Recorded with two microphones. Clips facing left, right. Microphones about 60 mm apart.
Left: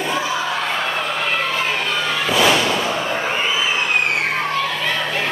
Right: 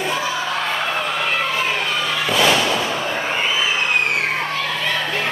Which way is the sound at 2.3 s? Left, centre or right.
Centre.